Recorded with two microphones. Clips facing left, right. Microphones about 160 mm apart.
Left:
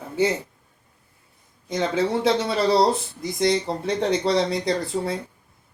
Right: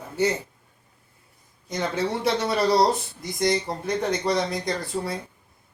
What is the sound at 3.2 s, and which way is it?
Speech, 25° left (ahead or behind).